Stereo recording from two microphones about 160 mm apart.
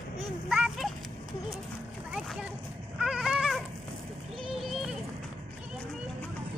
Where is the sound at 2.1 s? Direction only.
5° right (ahead or behind).